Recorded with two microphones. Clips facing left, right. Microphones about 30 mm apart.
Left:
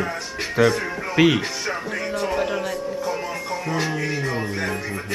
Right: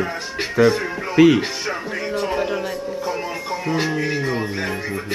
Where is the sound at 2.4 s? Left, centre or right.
Centre.